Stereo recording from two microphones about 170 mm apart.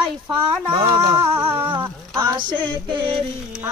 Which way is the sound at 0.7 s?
30° right (ahead or behind).